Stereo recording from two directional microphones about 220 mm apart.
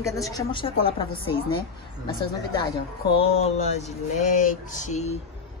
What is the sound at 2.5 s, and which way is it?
Speech, 25° left (ahead or behind).